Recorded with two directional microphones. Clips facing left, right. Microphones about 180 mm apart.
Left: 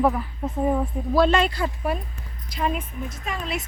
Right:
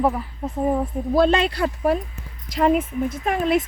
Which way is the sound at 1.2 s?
65° right (ahead or behind).